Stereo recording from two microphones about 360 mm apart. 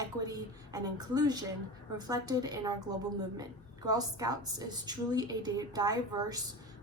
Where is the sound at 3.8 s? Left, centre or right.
Centre.